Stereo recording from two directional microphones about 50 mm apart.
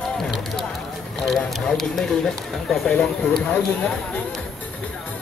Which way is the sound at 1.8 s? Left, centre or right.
Centre.